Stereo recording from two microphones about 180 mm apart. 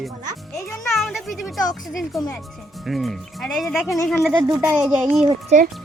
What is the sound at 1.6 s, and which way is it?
Speech, 20° left (ahead or behind).